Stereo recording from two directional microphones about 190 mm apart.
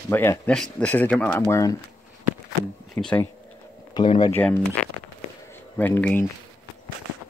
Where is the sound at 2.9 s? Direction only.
5° left (ahead or behind).